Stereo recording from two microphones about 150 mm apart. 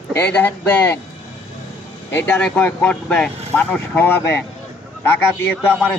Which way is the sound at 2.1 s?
10° left (ahead or behind).